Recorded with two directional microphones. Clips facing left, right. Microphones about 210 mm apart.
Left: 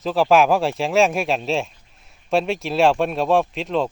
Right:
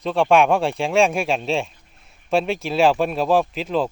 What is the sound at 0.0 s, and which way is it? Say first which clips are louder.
Speech: even; centre (ahead or behind).